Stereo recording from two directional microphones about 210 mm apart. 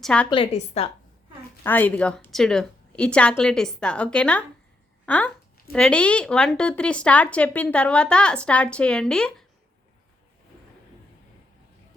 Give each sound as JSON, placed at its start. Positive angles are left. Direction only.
{"t": 0.0, "sound": "speech", "side_deg": 5}
{"t": 0.3, "sound": "a woman's voice", "side_deg": 25}
{"t": 1.6, "sound": "speech", "side_deg": 10}